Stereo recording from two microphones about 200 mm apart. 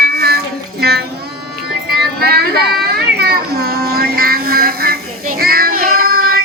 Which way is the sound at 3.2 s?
50° right (ahead or behind).